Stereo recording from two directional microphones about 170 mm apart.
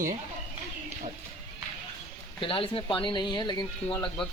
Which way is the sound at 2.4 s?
30° left (ahead or behind).